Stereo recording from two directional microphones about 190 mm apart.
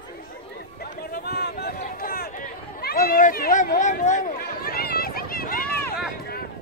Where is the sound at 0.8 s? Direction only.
55° left (ahead or behind).